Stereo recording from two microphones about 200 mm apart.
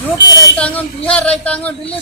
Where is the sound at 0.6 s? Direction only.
5° left (ahead or behind).